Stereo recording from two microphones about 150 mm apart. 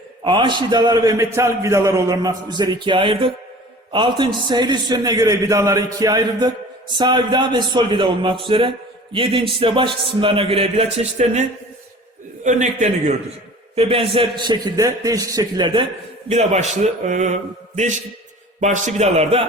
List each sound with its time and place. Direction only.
0.3 s a man's voice: 30° right (ahead or behind); by 13.1 s 50° right (ahead or behind)
13.7 s a man's voice: 40° right (ahead or behind)
16.3 s a man's voice: 50° right (ahead or behind)
18.6 s a man's voice: 50° right (ahead or behind)